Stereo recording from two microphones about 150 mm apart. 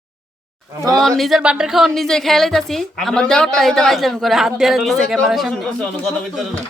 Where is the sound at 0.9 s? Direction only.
Centre (ahead or behind).